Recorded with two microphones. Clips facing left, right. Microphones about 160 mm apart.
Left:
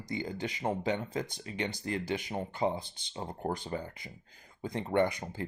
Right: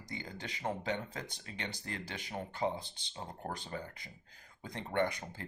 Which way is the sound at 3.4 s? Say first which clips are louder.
Left 8 dB; 30° left (ahead or behind).